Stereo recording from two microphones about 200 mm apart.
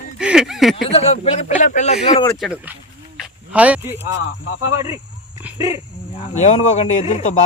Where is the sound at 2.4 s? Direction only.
5° right (ahead or behind).